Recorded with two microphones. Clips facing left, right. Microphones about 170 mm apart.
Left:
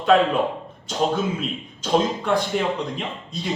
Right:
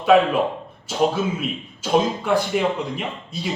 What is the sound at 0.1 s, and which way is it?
Speech, 5° right (ahead or behind).